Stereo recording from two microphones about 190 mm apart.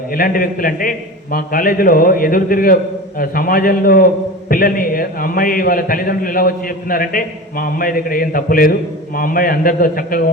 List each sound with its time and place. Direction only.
0.1 s a man's voice: 50° left (ahead or behind)